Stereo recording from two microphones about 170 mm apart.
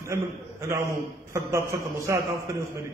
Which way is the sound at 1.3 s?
15° right (ahead or behind).